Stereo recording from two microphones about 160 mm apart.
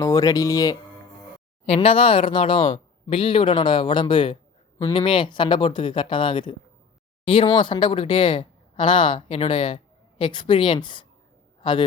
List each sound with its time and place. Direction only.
0.0 s speech: 20° left (ahead or behind)
1.6 s a man's voice: 40° left (ahead or behind)